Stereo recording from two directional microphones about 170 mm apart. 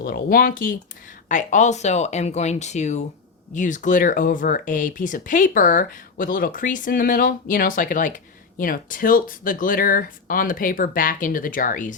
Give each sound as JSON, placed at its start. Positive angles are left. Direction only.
{"t": 0.0, "sound": "speech", "side_deg": 60}